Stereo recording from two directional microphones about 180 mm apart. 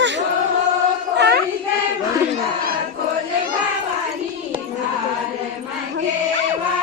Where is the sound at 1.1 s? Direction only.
70° right (ahead or behind).